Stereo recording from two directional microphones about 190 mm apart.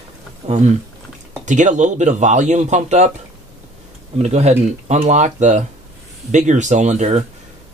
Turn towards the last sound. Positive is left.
turn(degrees=-35)  # may be behind; listen again after turning